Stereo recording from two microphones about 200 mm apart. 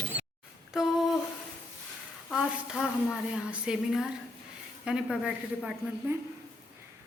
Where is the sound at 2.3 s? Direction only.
Centre (ahead or behind).